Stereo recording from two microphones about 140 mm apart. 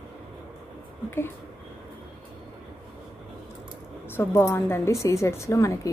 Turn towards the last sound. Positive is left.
turn(degrees=20)  # may be behind; listen again after turning